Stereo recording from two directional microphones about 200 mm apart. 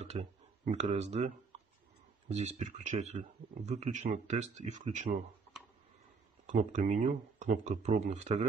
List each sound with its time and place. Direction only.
0.7 s speech: 30° right (ahead or behind)
6.4 s speech: 40° right (ahead or behind)